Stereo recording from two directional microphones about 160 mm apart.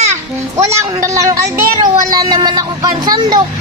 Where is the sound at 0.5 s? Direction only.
20° right (ahead or behind).